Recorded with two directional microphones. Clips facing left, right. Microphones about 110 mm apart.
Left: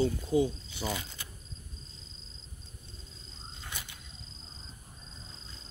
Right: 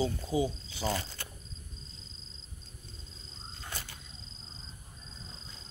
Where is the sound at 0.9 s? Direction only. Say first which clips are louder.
Right 3 dB; 15° left (ahead or behind).